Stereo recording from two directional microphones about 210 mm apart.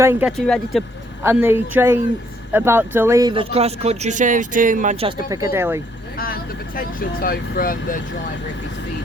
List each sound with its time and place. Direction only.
0.0 s speech: 10° right (ahead or behind)
1.2 s speech: 10° right (ahead or behind); by 5.1 s 30° right (ahead or behind)
5.5 s speech: 10° right (ahead or behind)
6.1 s speech: 45° left (ahead or behind)